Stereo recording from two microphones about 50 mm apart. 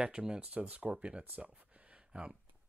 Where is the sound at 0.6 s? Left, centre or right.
Right.